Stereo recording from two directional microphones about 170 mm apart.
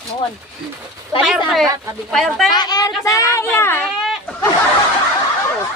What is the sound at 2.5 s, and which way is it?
A woman's voice, 25° left (ahead or behind).